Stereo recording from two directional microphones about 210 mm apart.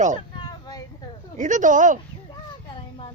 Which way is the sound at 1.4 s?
35° right (ahead or behind).